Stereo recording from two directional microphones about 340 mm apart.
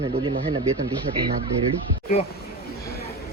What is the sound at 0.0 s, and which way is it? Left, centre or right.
Speech, centre.